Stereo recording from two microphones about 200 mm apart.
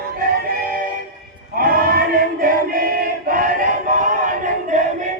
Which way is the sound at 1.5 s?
45° right (ahead or behind).